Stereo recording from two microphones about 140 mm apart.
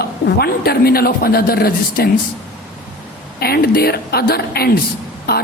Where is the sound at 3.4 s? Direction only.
90° left.